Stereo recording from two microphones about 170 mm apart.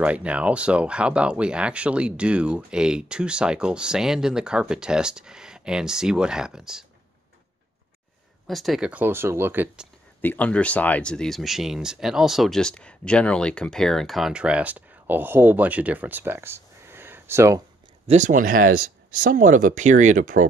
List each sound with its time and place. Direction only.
0.0 s speech: 5° right (ahead or behind)
8.5 s speech: centre (ahead or behind)
10.2 s speech: 10° left (ahead or behind); by 17.6 s 15° right (ahead or behind)
18.0 s speech: 45° right (ahead or behind)